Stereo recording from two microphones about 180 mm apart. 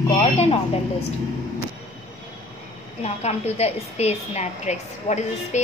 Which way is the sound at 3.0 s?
35° left (ahead or behind).